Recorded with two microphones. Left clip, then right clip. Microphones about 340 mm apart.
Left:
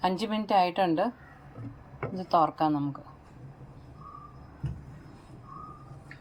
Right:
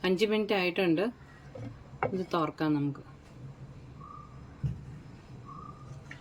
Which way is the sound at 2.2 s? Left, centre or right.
Centre.